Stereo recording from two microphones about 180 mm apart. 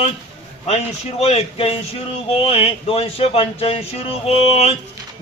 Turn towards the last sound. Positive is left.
turn(degrees=35)  # may be behind; listen again after turning